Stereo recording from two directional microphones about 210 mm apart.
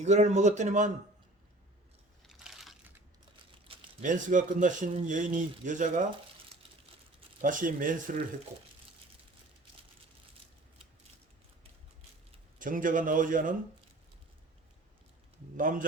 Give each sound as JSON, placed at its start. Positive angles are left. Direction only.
{"t": 0.0, "sound": "speech", "side_deg": -35}
{"t": 2.2, "sound": "a sound", "side_deg": 0}
{"t": 3.7, "sound": "crumpling", "side_deg": -25}
{"t": 4.0, "sound": "speech", "side_deg": -35}
{"t": 7.4, "sound": "speech", "side_deg": -40}
{"t": 12.5, "sound": "speech", "side_deg": -40}
{"t": 15.5, "sound": "speech", "side_deg": -40}